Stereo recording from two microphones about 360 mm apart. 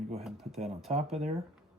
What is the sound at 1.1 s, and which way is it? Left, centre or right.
Speech, centre.